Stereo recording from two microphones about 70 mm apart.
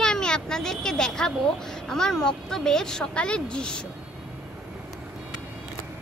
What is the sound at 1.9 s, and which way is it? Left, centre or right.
Speech, centre.